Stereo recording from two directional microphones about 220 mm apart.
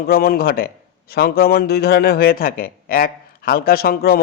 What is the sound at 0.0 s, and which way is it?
A man's voice, 45° left (ahead or behind).